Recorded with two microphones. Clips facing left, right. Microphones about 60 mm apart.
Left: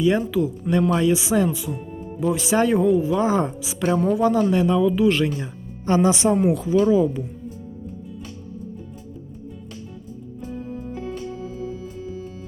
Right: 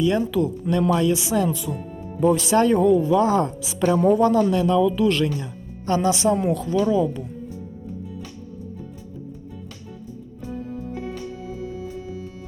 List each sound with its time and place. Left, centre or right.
0.0 s speech: centre
4.0 s speech: centre
5.3 s speech: left
6.3 s speech: centre